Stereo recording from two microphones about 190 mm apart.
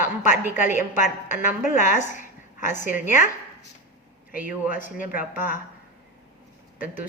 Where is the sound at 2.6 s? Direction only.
15° right (ahead or behind).